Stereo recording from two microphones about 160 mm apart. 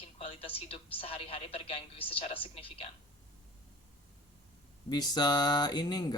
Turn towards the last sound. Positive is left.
turn(degrees=25)  # may be behind; listen again after turning